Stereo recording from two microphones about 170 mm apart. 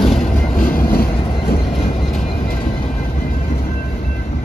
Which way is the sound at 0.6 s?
55° left (ahead or behind).